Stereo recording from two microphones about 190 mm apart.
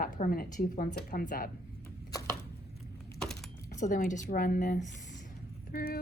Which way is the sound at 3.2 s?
Centre (ahead or behind).